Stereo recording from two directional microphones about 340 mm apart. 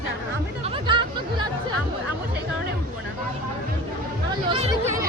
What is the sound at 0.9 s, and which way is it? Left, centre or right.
Speech, centre.